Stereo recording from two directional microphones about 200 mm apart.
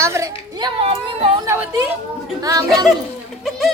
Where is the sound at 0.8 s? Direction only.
30° right (ahead or behind).